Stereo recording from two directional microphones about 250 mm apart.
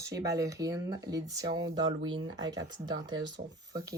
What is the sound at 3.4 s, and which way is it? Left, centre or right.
Speech, right.